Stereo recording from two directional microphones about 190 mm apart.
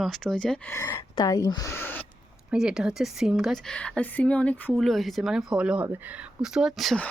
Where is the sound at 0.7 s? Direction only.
15° left (ahead or behind).